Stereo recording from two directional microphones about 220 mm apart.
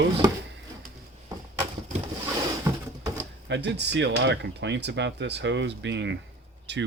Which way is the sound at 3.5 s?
50° right (ahead or behind).